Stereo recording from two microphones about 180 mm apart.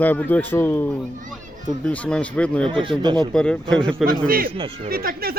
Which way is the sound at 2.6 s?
30° right (ahead or behind).